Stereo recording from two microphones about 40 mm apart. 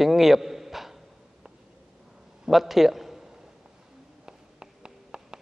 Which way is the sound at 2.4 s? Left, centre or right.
Centre.